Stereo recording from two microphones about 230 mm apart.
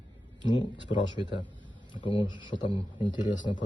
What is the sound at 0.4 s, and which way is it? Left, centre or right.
Speech, centre.